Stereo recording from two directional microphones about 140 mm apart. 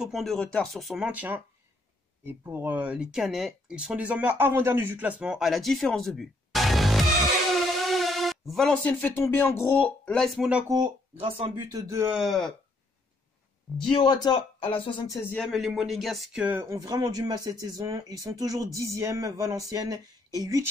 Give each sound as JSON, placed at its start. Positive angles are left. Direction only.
{"t": 0.0, "sound": "speech", "side_deg": 0}
{"t": 10.1, "sound": "speech", "side_deg": 0}
{"t": 10.7, "sound": "speech", "side_deg": -35}
{"t": 11.7, "sound": "speech", "side_deg": -20}
{"t": 12.1, "sound": "speech", "side_deg": 0}
{"t": 13.8, "sound": "speech", "side_deg": 35}
{"t": 15.3, "sound": "speech", "side_deg": 0}
{"t": 16.4, "sound": "speech", "side_deg": -20}